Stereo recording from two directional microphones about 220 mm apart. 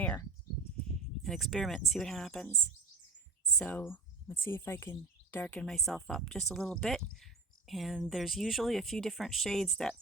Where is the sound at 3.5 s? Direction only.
5° left (ahead or behind).